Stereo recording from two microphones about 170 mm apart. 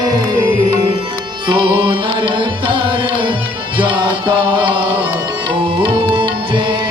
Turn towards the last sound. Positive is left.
turn(degrees=-30)  # may be behind; listen again after turning